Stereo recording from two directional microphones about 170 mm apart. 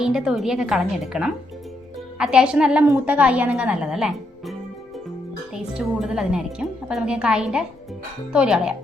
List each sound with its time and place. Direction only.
0.0 s a woman's voice: 5° right (ahead or behind)
5.5 s a woman's voice: 5° right (ahead or behind)